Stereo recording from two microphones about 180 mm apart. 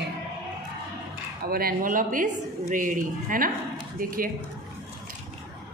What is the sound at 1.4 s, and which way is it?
A woman's voice, 55° right (ahead or behind).